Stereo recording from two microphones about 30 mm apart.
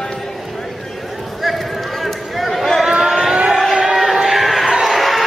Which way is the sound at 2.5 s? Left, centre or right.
Centre.